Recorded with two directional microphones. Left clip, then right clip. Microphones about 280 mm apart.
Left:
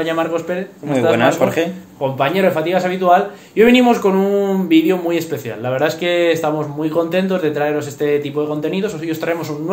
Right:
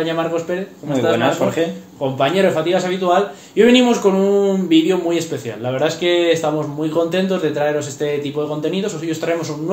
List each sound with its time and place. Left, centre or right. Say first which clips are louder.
0.0 s a man's voice: left 1 dB; left
1.1 s a man's voice: left 3 dB; left
2.1 s a man's voice: even; left